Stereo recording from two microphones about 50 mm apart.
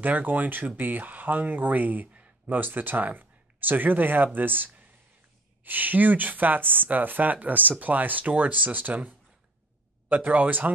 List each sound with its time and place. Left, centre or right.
0.0 s speech: right